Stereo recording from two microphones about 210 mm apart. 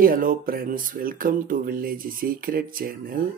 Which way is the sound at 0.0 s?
40° right (ahead or behind).